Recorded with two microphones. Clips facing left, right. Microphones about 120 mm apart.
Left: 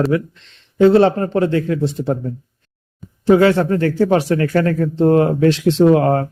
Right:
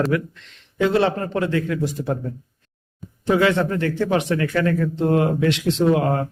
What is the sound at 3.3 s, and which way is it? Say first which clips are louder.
Speech: left 6 dB; 35° left (ahead or behind).